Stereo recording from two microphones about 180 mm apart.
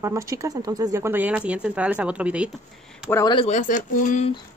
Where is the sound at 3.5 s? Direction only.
45° left (ahead or behind).